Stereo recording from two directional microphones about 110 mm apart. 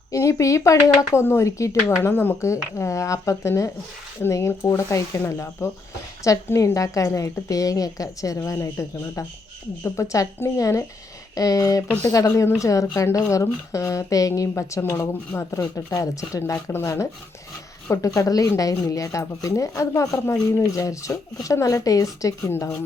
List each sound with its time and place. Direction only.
0.1 s a woman's voice: 30° left (ahead or behind)
9.8 s a woman's voice: 25° left (ahead or behind)